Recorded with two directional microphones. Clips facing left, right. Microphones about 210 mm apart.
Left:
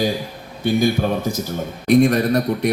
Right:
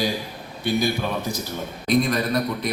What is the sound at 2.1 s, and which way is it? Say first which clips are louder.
Speech: left 6 dB; 40° left (ahead or behind).